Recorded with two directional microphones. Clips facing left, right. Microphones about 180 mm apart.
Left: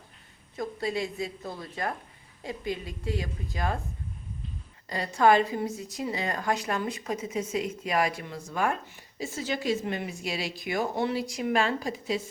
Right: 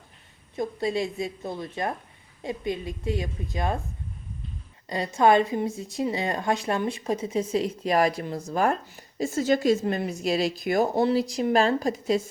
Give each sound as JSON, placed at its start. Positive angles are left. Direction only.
{"t": 0.5, "sound": "a woman's voice", "side_deg": -25}
{"t": 4.9, "sound": "speech", "side_deg": -20}